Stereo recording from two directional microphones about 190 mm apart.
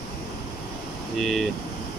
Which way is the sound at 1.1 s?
Centre (ahead or behind).